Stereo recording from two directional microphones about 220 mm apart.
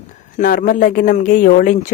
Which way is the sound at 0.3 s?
35° left (ahead or behind).